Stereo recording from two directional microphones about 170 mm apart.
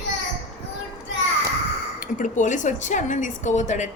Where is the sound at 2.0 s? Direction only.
50° left (ahead or behind).